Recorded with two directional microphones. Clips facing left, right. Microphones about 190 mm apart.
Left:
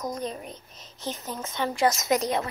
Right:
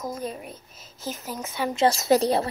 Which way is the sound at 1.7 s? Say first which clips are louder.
Right 4 dB; 30° right (ahead or behind).